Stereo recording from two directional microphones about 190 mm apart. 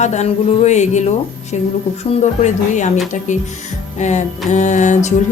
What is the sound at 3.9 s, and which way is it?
Music, 35° left (ahead or behind).